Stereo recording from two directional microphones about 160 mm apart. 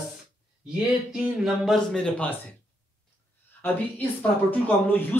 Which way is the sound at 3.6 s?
10° left (ahead or behind).